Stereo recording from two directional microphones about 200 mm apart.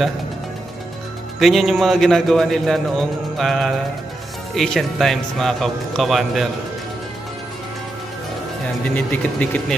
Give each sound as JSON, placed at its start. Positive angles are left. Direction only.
{"t": 1.4, "sound": "a man's voice", "side_deg": 0}
{"t": 8.8, "sound": "speech", "side_deg": 5}